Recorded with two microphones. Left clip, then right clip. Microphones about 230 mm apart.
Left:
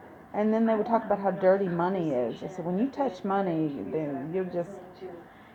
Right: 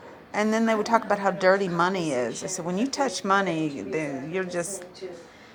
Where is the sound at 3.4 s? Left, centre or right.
Centre.